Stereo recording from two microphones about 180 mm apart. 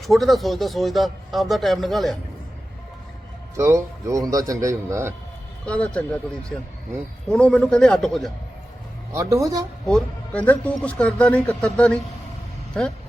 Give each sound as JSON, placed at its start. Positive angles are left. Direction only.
{"t": 0.0, "sound": "speech", "side_deg": 0}
{"t": 3.5, "sound": "a man's voice", "side_deg": -15}
{"t": 5.6, "sound": "speech", "side_deg": 5}
{"t": 7.3, "sound": "speech", "side_deg": 5}
{"t": 9.1, "sound": "a man's voice", "side_deg": -15}
{"t": 9.8, "sound": "speech", "side_deg": 5}